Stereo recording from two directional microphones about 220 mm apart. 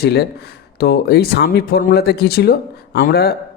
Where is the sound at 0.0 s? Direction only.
45° left (ahead or behind).